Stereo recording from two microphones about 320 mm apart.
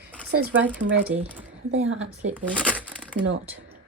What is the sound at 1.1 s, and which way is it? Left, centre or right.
Speech, centre.